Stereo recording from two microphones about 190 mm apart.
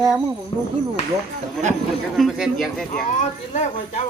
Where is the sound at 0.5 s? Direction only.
30° left (ahead or behind).